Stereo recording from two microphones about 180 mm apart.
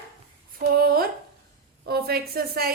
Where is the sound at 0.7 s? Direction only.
55° right (ahead or behind).